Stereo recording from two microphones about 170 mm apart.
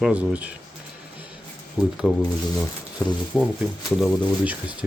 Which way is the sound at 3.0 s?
20° left (ahead or behind).